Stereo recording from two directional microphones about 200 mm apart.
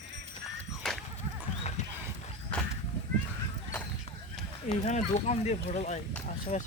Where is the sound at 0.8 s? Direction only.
Centre (ahead or behind).